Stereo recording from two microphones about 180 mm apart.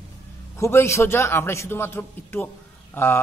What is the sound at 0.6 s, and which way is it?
A man's voice, 15° left (ahead or behind).